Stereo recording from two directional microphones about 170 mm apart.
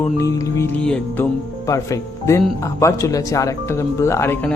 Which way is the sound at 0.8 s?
5° left (ahead or behind).